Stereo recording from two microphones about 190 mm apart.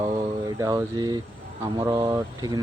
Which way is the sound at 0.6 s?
20° right (ahead or behind).